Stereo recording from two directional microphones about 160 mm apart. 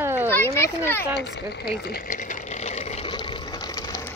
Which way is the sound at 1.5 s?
80° left.